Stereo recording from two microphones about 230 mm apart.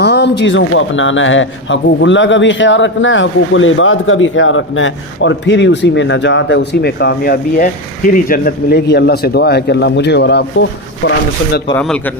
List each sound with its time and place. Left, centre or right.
0.0 s a man's voice: left
11.8 s a man's voice: centre